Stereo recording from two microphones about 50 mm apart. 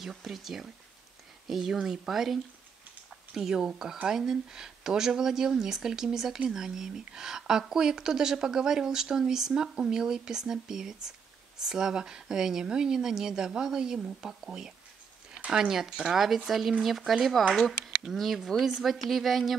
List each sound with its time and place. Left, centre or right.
0.0 s speech: centre